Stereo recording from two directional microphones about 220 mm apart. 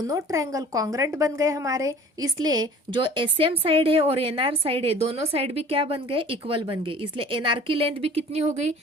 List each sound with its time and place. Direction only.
0.0 s a woman's voice: 15° right (ahead or behind); by 8.7 s 30° right (ahead or behind)